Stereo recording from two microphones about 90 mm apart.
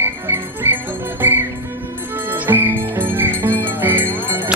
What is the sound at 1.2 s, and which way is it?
Music, 20° right (ahead or behind).